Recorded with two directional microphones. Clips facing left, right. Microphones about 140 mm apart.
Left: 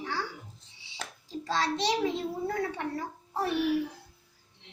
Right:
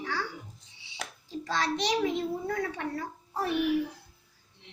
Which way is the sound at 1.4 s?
25° left (ahead or behind).